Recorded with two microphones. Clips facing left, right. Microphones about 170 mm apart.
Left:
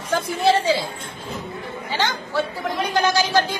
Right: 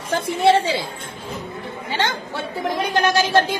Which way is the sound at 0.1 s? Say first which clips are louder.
Right 2 dB; 25° right (ahead or behind).